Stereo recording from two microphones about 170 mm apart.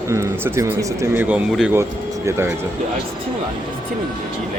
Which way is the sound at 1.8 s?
15° right (ahead or behind).